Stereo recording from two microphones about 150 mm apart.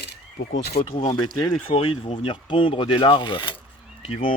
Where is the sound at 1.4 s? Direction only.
25° left (ahead or behind).